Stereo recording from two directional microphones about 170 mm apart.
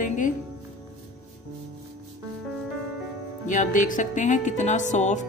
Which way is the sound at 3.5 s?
50° left (ahead or behind).